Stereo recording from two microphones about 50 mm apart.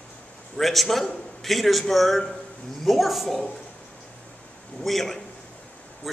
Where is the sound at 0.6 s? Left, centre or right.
Centre.